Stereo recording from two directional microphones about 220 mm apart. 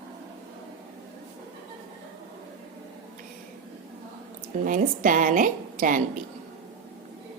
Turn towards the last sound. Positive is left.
turn(degrees=-40)  # may be behind; listen again after turning